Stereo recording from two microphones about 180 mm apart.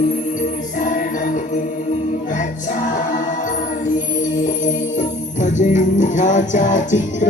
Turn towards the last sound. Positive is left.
turn(degrees=45)  # may be behind; listen again after turning